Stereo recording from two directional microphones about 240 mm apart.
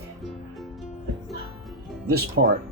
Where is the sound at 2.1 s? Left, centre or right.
Right.